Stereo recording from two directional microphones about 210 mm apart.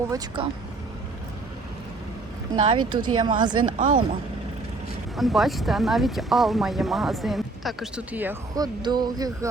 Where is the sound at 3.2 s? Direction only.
20° right (ahead or behind).